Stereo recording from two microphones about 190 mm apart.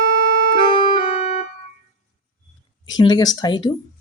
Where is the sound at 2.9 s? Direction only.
20° left (ahead or behind).